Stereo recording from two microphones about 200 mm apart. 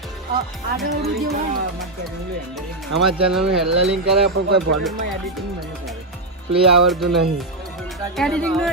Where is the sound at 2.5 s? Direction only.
Centre (ahead or behind).